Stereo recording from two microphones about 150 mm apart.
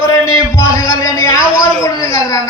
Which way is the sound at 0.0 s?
25° left (ahead or behind).